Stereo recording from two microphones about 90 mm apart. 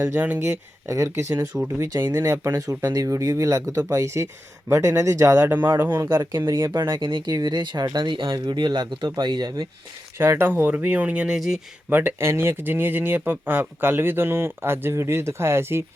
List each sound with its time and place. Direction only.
0.0 s speech: 20° right (ahead or behind)
0.4 s speech: 35° right (ahead or behind)
5.5 s speech: 20° right (ahead or behind)
6.9 s speech: 60° right (ahead or behind)
7.3 s speech: 50° right (ahead or behind)
10.2 s speech: 25° right (ahead or behind)
11.3 s speech: 5° right (ahead or behind)
11.9 s speech: 20° right (ahead or behind)